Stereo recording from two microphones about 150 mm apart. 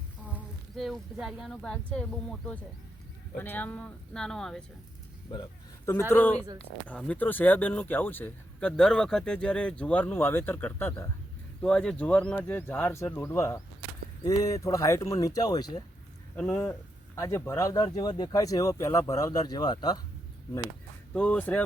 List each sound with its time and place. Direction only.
0.8 s speech: centre (ahead or behind)
3.3 s speech: 10° left (ahead or behind)
5.8 s speech: 20° left (ahead or behind)
11.6 s speech: 5° left (ahead or behind); by 15.8 s 25° left (ahead or behind)
16.3 s speech: 10° left (ahead or behind)
17.2 s speech: 20° left (ahead or behind)
21.1 s speech: 10° left (ahead or behind)